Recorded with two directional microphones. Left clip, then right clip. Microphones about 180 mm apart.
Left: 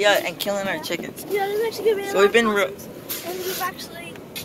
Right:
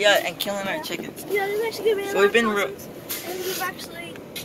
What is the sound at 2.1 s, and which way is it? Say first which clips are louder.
Speech: left 3 dB; 15° left (ahead or behind).